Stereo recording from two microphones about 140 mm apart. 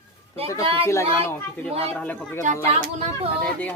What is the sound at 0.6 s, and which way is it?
Speech, 40° right (ahead or behind).